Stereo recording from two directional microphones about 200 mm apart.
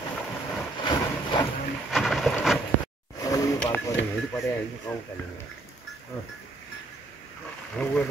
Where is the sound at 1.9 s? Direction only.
Centre (ahead or behind).